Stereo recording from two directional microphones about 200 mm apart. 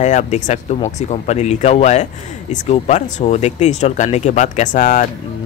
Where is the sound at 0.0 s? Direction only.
35° left (ahead or behind).